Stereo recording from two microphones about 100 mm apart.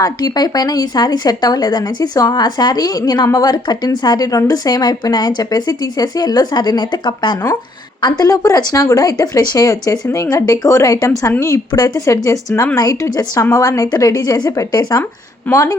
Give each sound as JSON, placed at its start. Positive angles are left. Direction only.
{"t": 0.0, "sound": "speech", "side_deg": 40}
{"t": 8.2, "sound": "speech", "side_deg": 35}
{"t": 15.5, "sound": "speech", "side_deg": 20}